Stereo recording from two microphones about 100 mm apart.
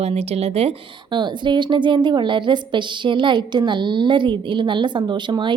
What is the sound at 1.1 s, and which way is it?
A woman's voice, 50° right (ahead or behind).